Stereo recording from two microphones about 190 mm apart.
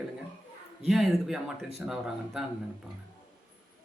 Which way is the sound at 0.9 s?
Centre (ahead or behind).